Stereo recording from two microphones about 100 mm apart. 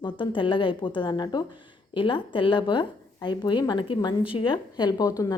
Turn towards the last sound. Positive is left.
turn(degrees=35)  # may be behind; listen again after turning